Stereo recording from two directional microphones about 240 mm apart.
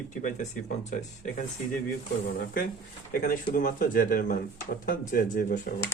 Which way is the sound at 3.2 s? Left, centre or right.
Left.